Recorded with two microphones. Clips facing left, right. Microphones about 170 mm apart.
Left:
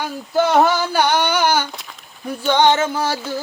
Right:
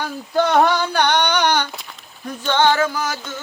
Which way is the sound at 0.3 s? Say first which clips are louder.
Left 1 dB; 5° left (ahead or behind).